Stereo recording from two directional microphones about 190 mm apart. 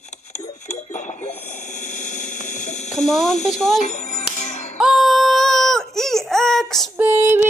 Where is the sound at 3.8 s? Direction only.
40° left (ahead or behind).